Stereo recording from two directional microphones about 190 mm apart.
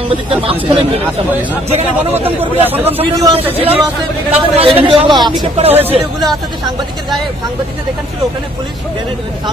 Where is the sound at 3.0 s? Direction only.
30° right (ahead or behind).